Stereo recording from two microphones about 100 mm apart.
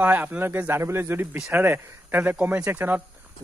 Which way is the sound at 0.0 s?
20° right (ahead or behind).